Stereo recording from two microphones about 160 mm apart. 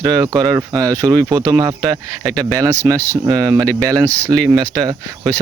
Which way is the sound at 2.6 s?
20° right (ahead or behind).